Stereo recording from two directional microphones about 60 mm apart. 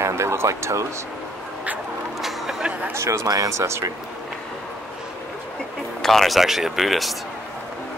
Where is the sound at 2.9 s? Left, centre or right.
Right.